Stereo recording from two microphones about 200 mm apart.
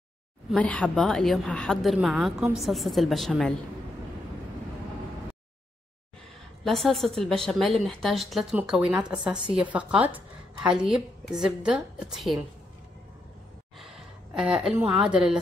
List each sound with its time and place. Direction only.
0.5 s a woman's voice: 5° left (ahead or behind)
6.6 s a woman's voice: centre (ahead or behind)
13.7 s a sound: centre (ahead or behind)